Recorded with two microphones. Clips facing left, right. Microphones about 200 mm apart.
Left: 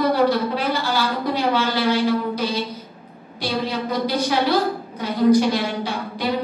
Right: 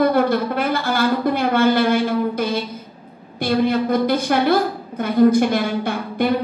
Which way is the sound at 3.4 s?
55° right (ahead or behind).